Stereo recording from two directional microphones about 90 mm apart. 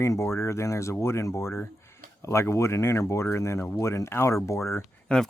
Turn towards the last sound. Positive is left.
turn(degrees=15)  # may be behind; listen again after turning